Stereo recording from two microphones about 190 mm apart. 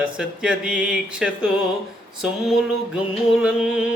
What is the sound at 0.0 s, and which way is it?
Mantra, 5° right (ahead or behind).